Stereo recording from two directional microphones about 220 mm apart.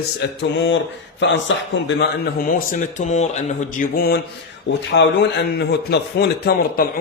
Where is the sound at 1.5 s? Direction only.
55° left (ahead or behind).